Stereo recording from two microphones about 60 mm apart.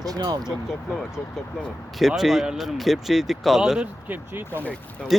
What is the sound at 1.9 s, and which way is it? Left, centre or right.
Speech, centre.